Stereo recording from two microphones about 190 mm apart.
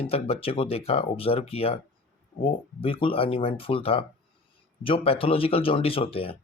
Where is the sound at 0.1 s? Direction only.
30° left (ahead or behind).